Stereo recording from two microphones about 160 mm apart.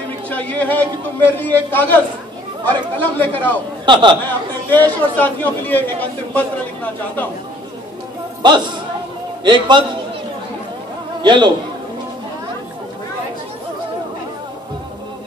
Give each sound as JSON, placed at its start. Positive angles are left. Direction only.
{"t": 0.3, "sound": "a man's voice", "side_deg": 10}
{"t": 3.8, "sound": "a man's voice", "side_deg": -30}
{"t": 4.6, "sound": "a man's voice", "side_deg": 10}
{"t": 8.4, "sound": "a man's voice", "side_deg": -25}
{"t": 11.2, "sound": "a man's voice", "side_deg": -30}